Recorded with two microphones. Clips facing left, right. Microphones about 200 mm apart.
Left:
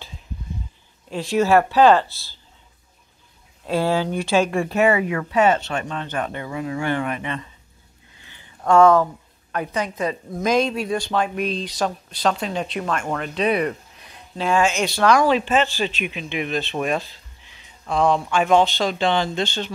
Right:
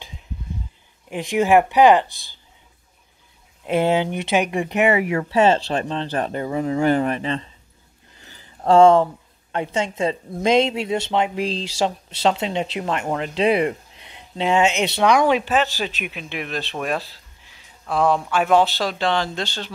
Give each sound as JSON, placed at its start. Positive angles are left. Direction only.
{"t": 1.1, "sound": "speech", "side_deg": -15}
{"t": 3.6, "sound": "speech", "side_deg": -20}
{"t": 15.8, "sound": "speech", "side_deg": -5}